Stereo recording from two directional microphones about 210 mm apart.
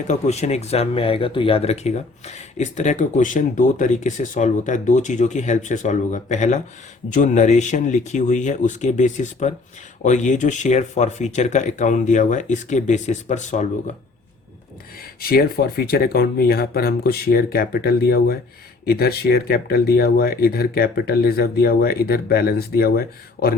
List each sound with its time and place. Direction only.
0.1 s speech: 30° left (ahead or behind)
15.2 s speech: 45° left (ahead or behind)